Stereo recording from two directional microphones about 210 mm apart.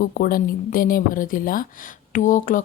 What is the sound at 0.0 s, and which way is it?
Speech, 45° left (ahead or behind).